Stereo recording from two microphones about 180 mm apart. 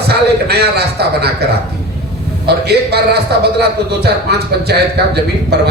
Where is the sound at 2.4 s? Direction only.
65° right (ahead or behind).